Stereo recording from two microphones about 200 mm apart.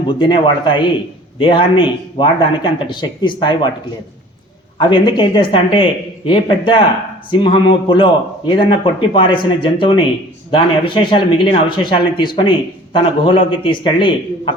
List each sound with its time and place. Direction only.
0.1 s a man's voice: 25° left (ahead or behind)
4.8 s a man's voice: 25° left (ahead or behind)